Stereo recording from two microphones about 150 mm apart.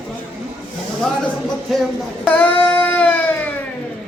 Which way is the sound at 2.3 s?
10° left (ahead or behind).